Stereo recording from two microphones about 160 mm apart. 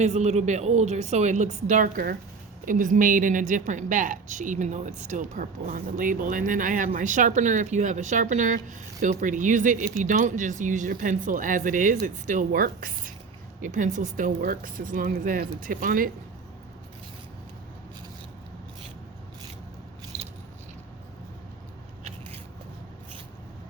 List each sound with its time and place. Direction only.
0.0 s a woman's voice: 45° right (ahead or behind); by 13.1 s 65° right (ahead or behind)
13.6 s speech: 55° right (ahead or behind)